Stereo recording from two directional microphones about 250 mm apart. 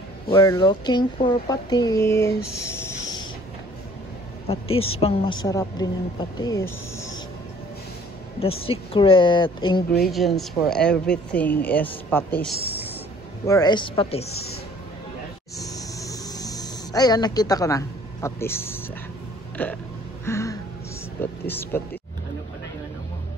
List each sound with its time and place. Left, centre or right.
0.3 s speech: centre
4.7 s speech: left
5.4 s speech: centre
8.4 s speech: left
10.0 s speech: centre; by 14.3 s left
15.7 s a sound: centre
19.5 s hiccup: centre
20.2 s music: centre
21.2 s speech: centre